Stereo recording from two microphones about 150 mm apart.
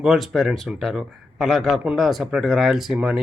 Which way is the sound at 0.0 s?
Centre (ahead or behind).